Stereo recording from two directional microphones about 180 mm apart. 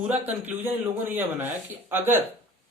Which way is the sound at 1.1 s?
10° right (ahead or behind).